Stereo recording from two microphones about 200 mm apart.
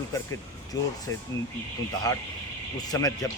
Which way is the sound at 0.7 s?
20° left (ahead or behind).